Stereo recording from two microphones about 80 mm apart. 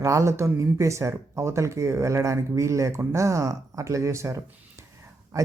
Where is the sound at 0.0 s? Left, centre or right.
Right.